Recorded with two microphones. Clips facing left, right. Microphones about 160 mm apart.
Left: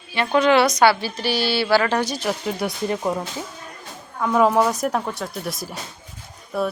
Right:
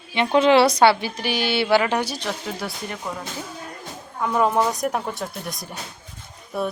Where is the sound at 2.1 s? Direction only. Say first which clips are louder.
Left 4 dB; 5° left (ahead or behind).